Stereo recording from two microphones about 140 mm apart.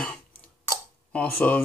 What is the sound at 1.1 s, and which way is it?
Speech, 10° left (ahead or behind).